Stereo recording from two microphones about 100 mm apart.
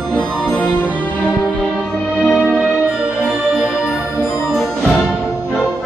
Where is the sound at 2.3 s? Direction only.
Centre (ahead or behind).